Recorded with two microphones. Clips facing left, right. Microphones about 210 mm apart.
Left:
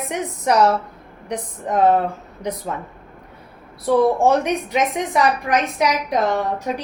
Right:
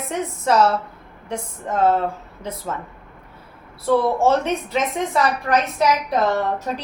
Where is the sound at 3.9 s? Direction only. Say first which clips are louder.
Left 2 dB; 20° left (ahead or behind).